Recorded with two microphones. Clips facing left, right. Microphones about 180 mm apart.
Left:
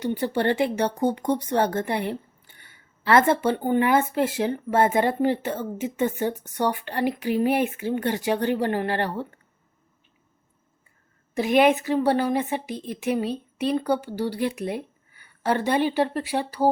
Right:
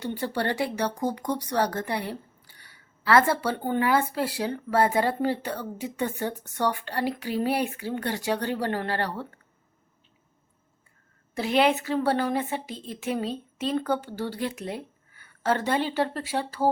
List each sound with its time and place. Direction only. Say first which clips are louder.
0.0 s speech: left 5 dB; 20° left (ahead or behind)
11.3 s a woman's voice: left 4 dB; 15° left (ahead or behind)